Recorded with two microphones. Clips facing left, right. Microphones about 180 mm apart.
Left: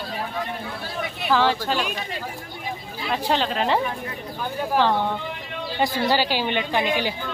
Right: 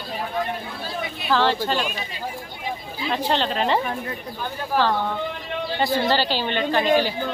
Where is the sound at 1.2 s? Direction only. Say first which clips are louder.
Even; 10° left (ahead or behind).